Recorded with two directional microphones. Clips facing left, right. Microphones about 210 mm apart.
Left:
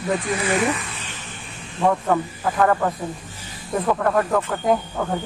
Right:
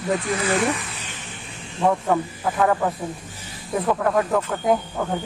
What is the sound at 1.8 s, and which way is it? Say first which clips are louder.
Speech: left 1 dB; 10° right (ahead or behind).